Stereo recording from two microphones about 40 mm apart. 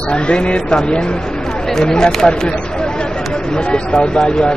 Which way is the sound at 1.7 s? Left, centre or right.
Centre.